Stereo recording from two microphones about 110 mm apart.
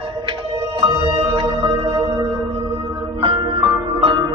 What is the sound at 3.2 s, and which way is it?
Music, 50° right (ahead or behind).